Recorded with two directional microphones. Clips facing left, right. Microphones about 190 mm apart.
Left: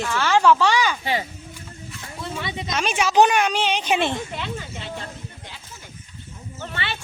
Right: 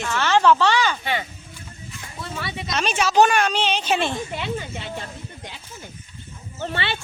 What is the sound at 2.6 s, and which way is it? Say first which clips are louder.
Speech: right 1 dB; 10° left (ahead or behind).